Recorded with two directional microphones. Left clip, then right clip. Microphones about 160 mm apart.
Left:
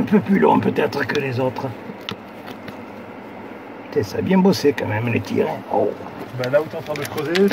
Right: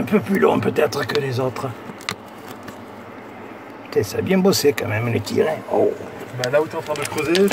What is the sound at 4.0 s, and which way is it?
Speech, 20° right (ahead or behind).